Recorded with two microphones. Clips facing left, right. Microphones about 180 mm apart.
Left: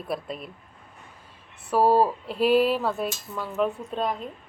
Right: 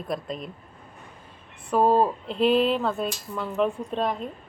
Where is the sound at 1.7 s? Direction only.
5° left (ahead or behind).